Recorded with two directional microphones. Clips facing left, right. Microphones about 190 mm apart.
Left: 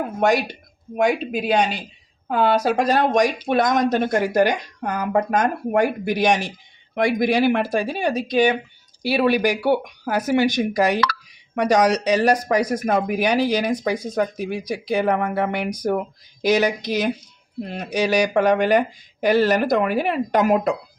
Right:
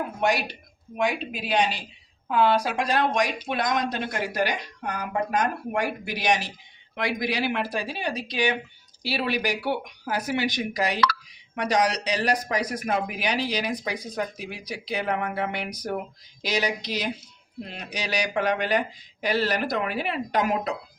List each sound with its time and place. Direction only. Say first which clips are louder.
0.9 s a woman's voice: left 7 dB; 45° left (ahead or behind)